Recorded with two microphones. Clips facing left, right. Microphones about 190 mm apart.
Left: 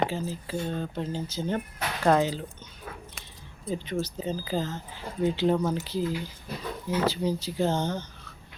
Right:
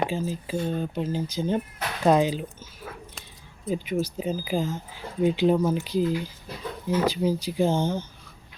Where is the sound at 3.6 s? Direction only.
10° right (ahead or behind).